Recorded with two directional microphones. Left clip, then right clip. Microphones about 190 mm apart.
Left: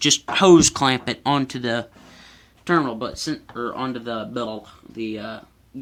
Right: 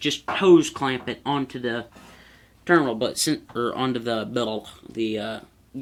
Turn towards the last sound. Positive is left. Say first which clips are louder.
# right 3 dB
turn(degrees=-5)  # may be behind; listen again after turning